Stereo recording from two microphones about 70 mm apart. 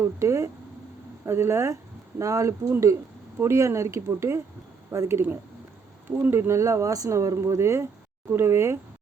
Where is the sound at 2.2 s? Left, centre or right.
Right.